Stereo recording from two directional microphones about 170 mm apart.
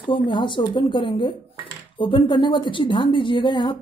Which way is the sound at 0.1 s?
30° left (ahead or behind).